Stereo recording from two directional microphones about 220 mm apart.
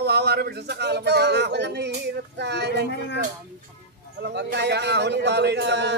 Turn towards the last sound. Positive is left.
turn(degrees=-50)  # may be behind; listen again after turning